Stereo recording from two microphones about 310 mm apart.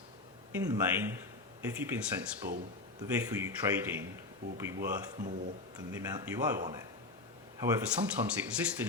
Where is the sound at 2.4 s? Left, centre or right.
Right.